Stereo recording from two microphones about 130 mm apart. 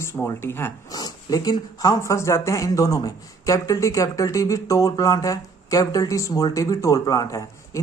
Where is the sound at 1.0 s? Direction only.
30° left (ahead or behind).